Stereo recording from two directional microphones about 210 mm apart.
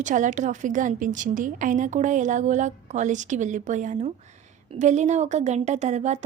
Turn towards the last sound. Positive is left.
turn(degrees=-35)  # may be behind; listen again after turning